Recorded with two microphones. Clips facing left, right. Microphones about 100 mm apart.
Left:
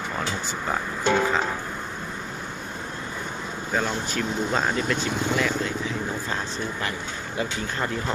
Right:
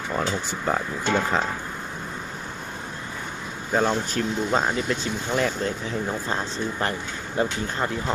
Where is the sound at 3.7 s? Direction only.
35° right (ahead or behind).